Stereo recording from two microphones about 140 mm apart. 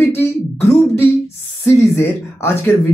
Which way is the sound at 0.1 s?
15° left (ahead or behind).